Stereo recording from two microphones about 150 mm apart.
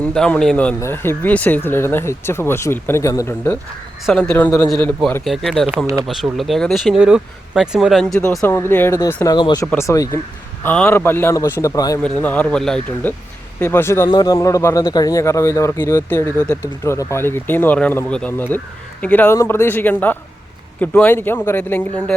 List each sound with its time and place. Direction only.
0.0 s speech: 5° left (ahead or behind)
5.7 s speech: 20° right (ahead or behind)
6.1 s speech: centre (ahead or behind)
8.4 s a man's voice: 20° left (ahead or behind)
12.2 s a man's voice: 10° left (ahead or behind)